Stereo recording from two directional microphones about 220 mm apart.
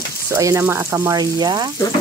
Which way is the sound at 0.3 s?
15° right (ahead or behind).